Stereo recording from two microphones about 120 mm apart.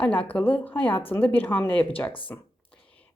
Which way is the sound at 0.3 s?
15° left (ahead or behind).